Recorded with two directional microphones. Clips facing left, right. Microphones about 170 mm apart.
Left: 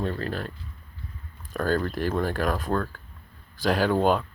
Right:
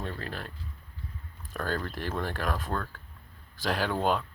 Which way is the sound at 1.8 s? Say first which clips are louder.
Left 7 dB; 5° left (ahead or behind).